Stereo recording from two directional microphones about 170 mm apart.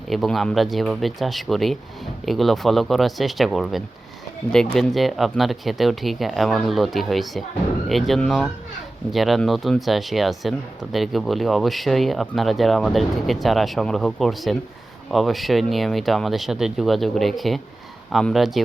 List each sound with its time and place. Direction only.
0.1 s speech: centre (ahead or behind)